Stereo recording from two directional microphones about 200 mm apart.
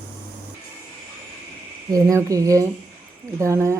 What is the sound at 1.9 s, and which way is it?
Speech, 15° right (ahead or behind).